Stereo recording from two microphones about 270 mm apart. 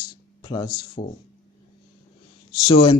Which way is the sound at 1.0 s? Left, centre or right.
Left.